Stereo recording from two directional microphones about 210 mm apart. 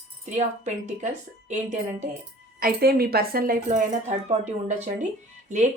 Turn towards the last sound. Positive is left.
turn(degrees=-35)  # may be behind; listen again after turning